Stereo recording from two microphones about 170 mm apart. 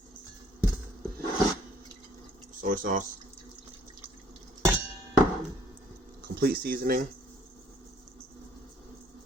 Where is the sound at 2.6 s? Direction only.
55° right (ahead or behind).